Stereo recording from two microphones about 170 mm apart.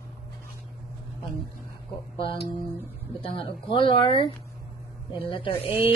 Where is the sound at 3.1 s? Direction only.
30° left (ahead or behind).